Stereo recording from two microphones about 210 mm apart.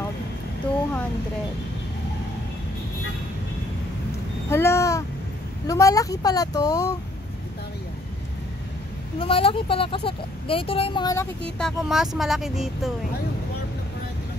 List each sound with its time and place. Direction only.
4.5 s a sound: 10° left (ahead or behind)
5.7 s speech: 15° left (ahead or behind)
9.2 s speech: 25° left (ahead or behind)
11.5 s speech: centre (ahead or behind)